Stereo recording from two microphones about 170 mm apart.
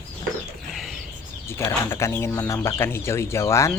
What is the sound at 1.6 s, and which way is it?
Speech, 15° left (ahead or behind).